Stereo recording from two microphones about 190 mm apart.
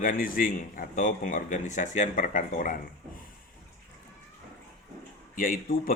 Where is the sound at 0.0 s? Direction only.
45° left (ahead or behind).